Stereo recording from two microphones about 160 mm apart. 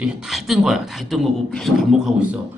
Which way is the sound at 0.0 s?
5° right (ahead or behind).